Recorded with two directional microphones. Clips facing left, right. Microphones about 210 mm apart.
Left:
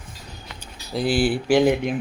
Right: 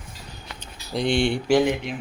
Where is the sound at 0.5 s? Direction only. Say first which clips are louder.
Left 1 dB; 5° left (ahead or behind).